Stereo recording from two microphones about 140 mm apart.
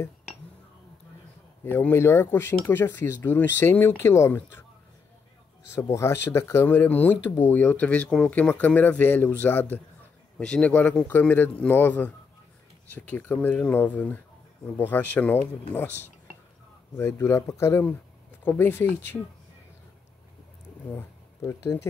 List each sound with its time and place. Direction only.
1.6 s speech: 15° left (ahead or behind)
5.8 s speech: 20° left (ahead or behind)
16.9 s speech: 15° left (ahead or behind)
20.9 s speech: 20° left (ahead or behind)